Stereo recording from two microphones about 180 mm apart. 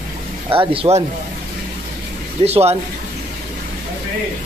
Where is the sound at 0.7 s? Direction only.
35° right (ahead or behind).